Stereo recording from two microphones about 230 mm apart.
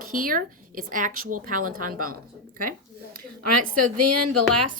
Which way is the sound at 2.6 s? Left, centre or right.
Right.